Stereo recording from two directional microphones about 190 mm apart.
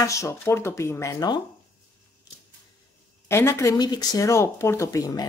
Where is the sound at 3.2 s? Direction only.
15° left (ahead or behind).